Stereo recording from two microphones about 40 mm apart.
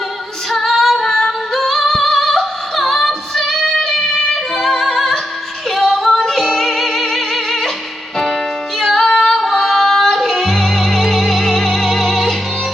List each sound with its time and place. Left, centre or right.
0.5 s singing: centre
3.1 s female singing: centre
4.8 s music: centre
5.7 s child singing: centre
6.1 s music: centre
8.8 s music: centre